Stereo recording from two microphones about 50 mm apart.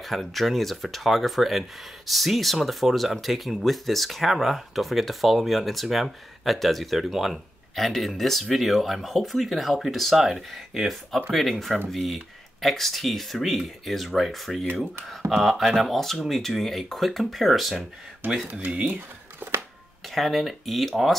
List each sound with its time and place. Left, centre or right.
0.0 s speech: centre
18.2 s speech: right
18.8 s a sound: right
20.2 s speech: centre